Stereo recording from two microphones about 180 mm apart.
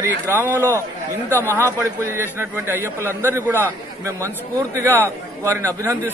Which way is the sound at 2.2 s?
10° right (ahead or behind).